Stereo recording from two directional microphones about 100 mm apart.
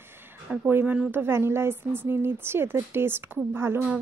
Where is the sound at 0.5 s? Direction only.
20° right (ahead or behind).